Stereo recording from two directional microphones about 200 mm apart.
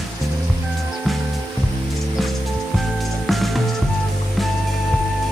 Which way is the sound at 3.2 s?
Centre (ahead or behind).